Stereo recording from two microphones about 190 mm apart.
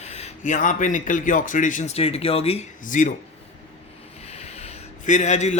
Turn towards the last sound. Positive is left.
turn(degrees=40)  # may be behind; listen again after turning